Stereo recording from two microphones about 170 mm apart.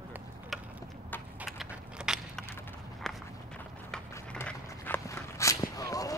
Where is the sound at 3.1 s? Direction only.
Centre (ahead or behind).